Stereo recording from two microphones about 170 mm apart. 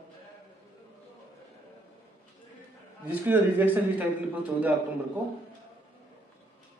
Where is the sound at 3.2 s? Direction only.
10° right (ahead or behind).